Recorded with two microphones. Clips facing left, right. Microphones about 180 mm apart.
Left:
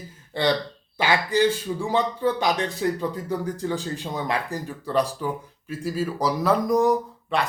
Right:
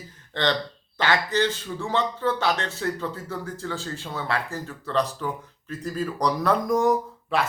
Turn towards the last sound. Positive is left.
turn(degrees=0)  # may be behind; listen again after turning